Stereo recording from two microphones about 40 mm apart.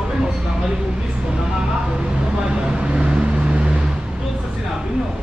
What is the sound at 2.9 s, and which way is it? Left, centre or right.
Vehicle, right.